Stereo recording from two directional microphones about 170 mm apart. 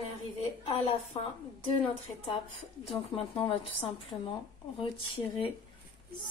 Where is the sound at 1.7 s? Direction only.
35° left (ahead or behind).